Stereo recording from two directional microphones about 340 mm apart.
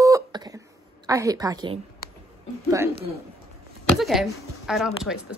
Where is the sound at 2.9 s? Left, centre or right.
Right.